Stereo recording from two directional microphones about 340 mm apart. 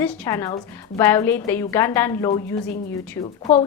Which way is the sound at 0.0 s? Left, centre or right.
Centre.